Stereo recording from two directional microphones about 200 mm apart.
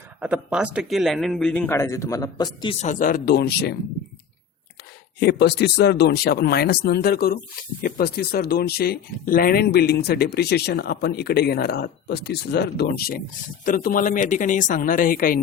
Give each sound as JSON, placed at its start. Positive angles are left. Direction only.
{"t": 0.2, "sound": "speech", "side_deg": -5}
{"t": 2.8, "sound": "speech", "side_deg": 40}
{"t": 5.2, "sound": "speech", "side_deg": 55}